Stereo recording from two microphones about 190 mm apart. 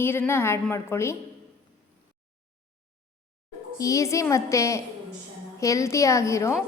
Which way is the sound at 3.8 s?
15° left (ahead or behind).